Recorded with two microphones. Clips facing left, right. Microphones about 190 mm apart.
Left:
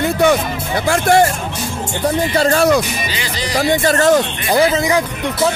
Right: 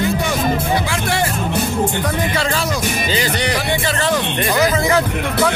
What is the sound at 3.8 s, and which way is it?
Speech, 45° left (ahead or behind).